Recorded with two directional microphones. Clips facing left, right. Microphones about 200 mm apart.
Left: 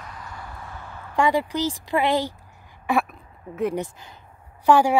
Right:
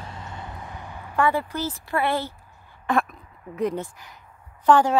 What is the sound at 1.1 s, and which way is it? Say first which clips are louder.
Speech: left 2 dB; 15° left (ahead or behind).